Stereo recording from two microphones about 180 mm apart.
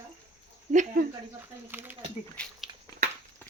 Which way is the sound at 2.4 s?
5° left (ahead or behind).